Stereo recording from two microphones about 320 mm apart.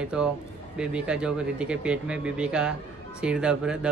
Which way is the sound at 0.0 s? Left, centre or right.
Centre.